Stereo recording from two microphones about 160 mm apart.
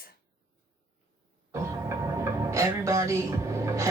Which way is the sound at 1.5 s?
15° right (ahead or behind).